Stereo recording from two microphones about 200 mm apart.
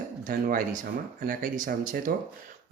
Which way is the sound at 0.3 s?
45° right (ahead or behind).